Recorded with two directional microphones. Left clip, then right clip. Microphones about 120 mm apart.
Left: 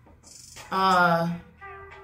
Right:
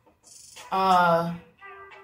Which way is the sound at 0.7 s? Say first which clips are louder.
Even; centre (ahead or behind).